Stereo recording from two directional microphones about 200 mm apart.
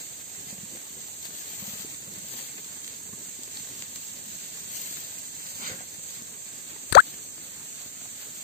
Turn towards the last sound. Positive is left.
turn(degrees=55)  # may be behind; listen again after turning